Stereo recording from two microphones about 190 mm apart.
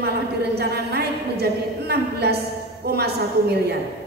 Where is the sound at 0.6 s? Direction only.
55° right (ahead or behind).